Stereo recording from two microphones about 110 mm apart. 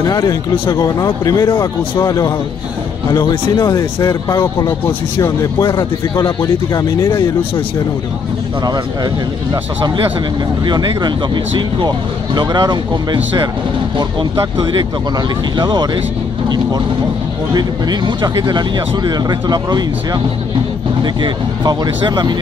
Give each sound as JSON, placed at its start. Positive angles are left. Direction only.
{"t": 0.0, "sound": "speech", "side_deg": 35}
{"t": 8.6, "sound": "speech", "side_deg": -35}
{"t": 14.6, "sound": "speech", "side_deg": -45}
{"t": 17.6, "sound": "speech", "side_deg": -40}